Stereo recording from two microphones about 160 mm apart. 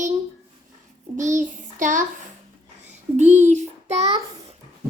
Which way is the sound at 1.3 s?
50° right (ahead or behind).